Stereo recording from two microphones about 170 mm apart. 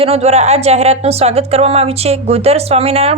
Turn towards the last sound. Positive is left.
turn(degrees=-35)  # may be behind; listen again after turning